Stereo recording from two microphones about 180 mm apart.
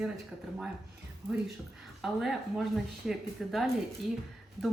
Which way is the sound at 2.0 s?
Centre (ahead or behind).